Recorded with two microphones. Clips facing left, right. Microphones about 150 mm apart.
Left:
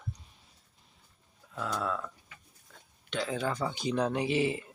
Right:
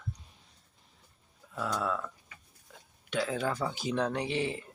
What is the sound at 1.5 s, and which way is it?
Speech, 5° right (ahead or behind).